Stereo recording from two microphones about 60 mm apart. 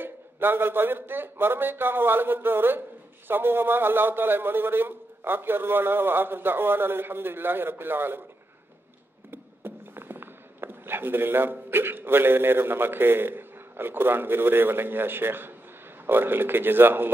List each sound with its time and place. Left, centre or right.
0.0 s a man's voice: right
9.3 s a sound: right
11.7 s a man's voice: right